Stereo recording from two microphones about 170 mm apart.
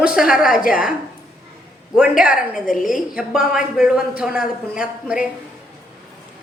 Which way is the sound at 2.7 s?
55° left (ahead or behind).